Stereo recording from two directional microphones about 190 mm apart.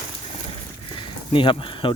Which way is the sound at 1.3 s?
25° left (ahead or behind).